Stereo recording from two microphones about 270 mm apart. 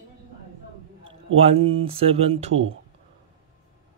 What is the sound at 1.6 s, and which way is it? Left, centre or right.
Speech, right.